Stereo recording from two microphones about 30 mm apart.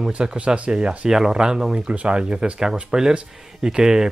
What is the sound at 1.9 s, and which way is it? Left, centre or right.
Speech, right.